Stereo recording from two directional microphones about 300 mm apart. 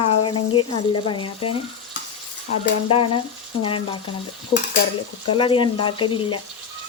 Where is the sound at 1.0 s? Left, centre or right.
Centre.